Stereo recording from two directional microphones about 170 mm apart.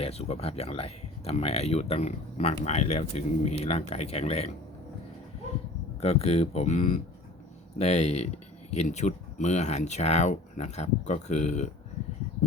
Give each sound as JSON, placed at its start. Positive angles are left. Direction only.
{"t": 0.0, "sound": "speech", "side_deg": 35}
{"t": 6.0, "sound": "speech", "side_deg": 35}